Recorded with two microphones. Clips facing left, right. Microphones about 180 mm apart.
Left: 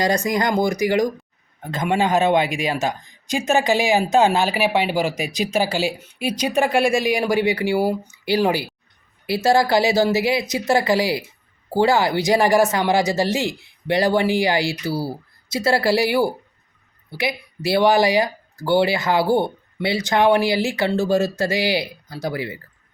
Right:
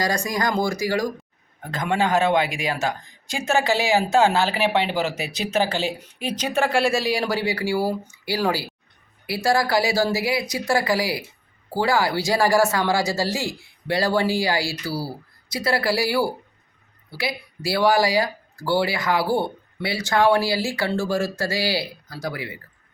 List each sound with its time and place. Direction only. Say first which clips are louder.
0.0 s a man's voice: left 4 dB; 20° left (ahead or behind)